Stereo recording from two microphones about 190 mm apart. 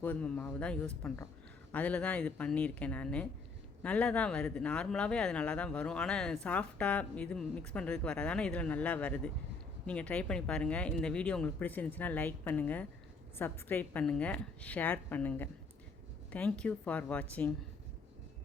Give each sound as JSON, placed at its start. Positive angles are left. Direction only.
{"t": 0.0, "sound": "speech", "side_deg": 10}